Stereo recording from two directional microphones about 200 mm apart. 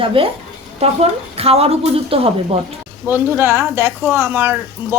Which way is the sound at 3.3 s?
10° right (ahead or behind).